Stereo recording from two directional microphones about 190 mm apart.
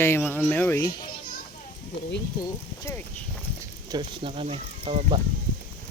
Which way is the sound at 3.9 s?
30° right (ahead or behind).